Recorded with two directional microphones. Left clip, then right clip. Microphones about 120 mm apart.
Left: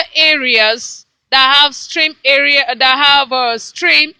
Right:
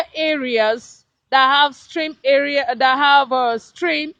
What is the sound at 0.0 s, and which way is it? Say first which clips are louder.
Speech: left 9 dB; 20° right (ahead or behind).